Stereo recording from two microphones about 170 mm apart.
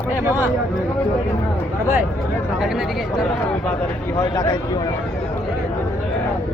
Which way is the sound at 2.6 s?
5° right (ahead or behind).